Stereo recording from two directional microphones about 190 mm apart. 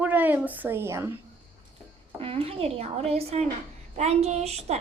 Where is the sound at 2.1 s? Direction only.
30° right (ahead or behind).